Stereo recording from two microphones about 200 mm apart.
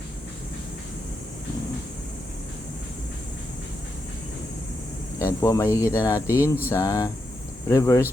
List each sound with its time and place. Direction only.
5.2 s speech: 15° left (ahead or behind)
6.3 s a sound: 10° right (ahead or behind)
6.7 s speech: 15° left (ahead or behind)